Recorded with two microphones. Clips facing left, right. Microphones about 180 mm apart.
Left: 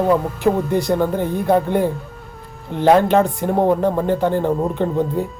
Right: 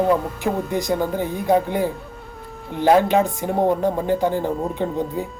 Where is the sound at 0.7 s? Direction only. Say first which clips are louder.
Left 4 dB; 15° right (ahead or behind).